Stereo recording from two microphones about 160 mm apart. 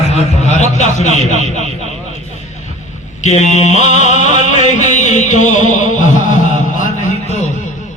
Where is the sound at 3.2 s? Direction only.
45° left (ahead or behind).